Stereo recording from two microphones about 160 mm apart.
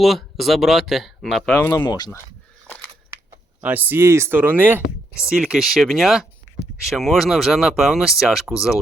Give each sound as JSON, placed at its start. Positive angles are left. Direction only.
{"t": 0.0, "sound": "speech", "side_deg": 0}
{"t": 1.7, "sound": "speech", "side_deg": 20}
{"t": 3.6, "sound": "speech", "side_deg": -10}